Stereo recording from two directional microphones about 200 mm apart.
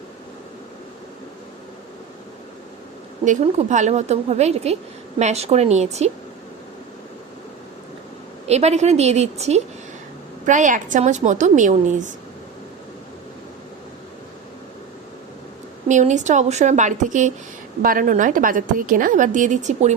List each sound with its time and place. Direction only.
3.2 s a woman's voice: 35° right (ahead or behind)
8.4 s a woman's voice: 35° right (ahead or behind)
15.9 s a woman's voice: 35° right (ahead or behind)